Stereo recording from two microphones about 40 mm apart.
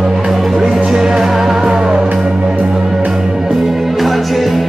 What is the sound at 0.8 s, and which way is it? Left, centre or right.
Music, centre.